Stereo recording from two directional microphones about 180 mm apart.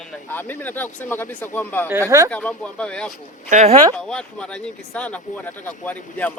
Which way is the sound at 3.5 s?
40° right (ahead or behind).